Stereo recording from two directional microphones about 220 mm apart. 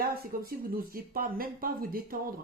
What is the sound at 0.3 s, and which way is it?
Speech, 40° right (ahead or behind).